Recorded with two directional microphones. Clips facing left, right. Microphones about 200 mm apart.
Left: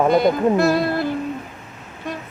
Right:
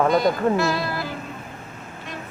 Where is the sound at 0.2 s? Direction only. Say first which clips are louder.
Left 4 dB; 55° left (ahead or behind).